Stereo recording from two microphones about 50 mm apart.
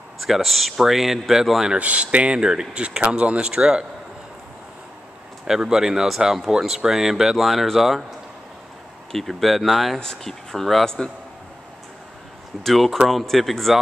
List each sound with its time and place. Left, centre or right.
0.3 s speech: centre
1.8 s speech: right
5.5 s speech: centre
9.1 s speech: centre
9.9 s speech: centre
12.6 s speech: centre